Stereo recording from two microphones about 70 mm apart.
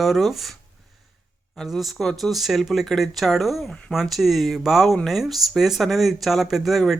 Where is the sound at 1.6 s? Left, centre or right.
Centre.